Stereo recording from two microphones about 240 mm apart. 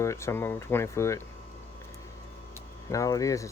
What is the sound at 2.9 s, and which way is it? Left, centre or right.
Speech, centre.